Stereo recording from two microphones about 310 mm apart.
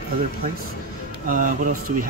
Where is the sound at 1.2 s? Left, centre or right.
Right.